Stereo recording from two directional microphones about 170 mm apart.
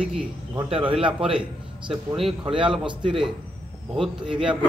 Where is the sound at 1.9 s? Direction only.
Centre (ahead or behind).